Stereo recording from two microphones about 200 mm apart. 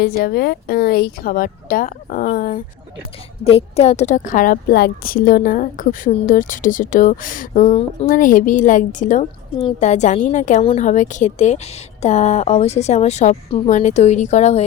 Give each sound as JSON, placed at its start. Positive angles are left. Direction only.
{"t": 0.0, "sound": "speech", "side_deg": 50}
{"t": 3.4, "sound": "a woman's voice", "side_deg": 30}
{"t": 7.6, "sound": "speech", "side_deg": 30}
{"t": 8.0, "sound": "a woman's voice", "side_deg": 40}